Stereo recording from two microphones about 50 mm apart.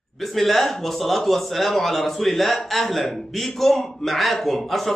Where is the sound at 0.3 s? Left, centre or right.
Centre.